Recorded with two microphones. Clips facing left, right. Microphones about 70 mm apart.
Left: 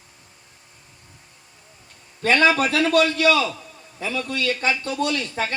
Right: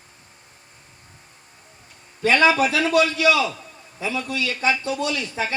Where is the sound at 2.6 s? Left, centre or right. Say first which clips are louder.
Even; left.